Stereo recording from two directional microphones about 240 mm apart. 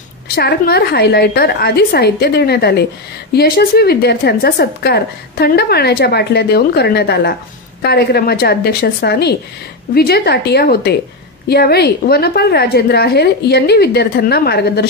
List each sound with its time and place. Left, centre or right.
0.4 s a woman's voice: left